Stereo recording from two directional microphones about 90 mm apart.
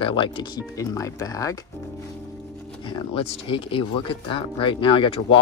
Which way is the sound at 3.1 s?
85° left.